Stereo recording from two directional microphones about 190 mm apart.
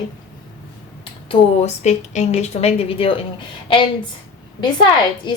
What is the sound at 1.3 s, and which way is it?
A woman's voice, 35° left (ahead or behind).